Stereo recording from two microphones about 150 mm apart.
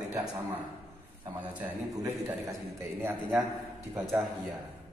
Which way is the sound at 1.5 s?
10° right (ahead or behind).